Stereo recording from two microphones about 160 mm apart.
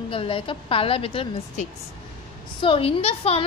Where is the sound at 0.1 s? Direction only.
35° left (ahead or behind).